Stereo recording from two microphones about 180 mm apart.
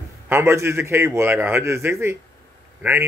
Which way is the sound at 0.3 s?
15° right (ahead or behind).